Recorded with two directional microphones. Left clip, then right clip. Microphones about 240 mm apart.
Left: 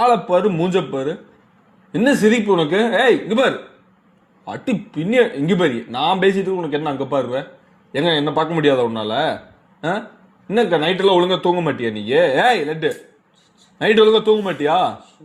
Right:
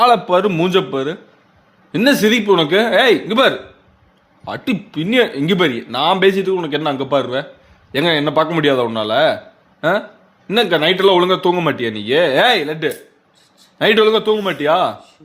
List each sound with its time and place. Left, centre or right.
0.0 s speech: right
10.4 s speech: right